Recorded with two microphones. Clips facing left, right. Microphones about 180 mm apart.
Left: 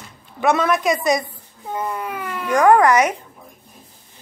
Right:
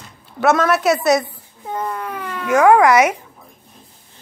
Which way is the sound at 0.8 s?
75° right (ahead or behind).